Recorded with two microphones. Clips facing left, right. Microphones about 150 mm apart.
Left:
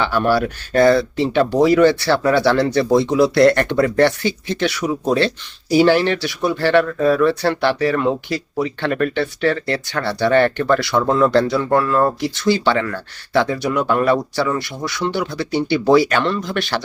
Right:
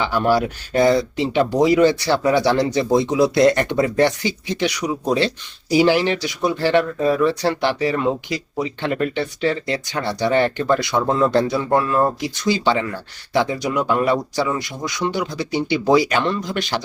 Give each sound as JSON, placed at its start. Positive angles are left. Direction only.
{"t": 0.0, "sound": "speech", "side_deg": -20}